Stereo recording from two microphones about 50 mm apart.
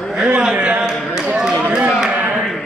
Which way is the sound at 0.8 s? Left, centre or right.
Centre.